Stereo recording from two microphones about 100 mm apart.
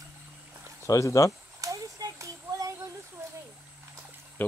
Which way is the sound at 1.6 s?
35° right (ahead or behind).